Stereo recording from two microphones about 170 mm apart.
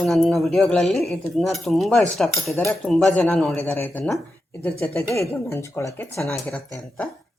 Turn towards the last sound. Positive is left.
turn(degrees=10)  # may be behind; listen again after turning